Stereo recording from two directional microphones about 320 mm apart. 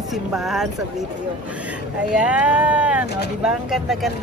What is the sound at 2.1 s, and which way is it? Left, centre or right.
Speech, centre.